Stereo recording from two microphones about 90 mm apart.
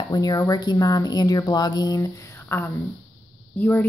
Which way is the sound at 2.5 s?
30° left (ahead or behind).